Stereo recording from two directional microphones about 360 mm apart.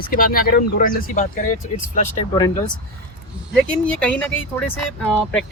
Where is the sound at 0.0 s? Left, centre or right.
Left.